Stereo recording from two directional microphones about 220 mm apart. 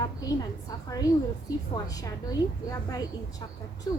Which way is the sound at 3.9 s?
15° left (ahead or behind).